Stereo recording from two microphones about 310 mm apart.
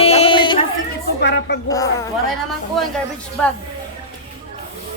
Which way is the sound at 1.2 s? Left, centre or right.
Left.